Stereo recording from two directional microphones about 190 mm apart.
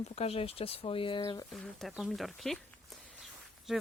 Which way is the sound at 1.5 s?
Centre (ahead or behind).